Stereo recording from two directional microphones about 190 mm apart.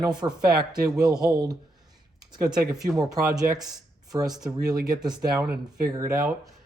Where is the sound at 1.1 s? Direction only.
5° right (ahead or behind).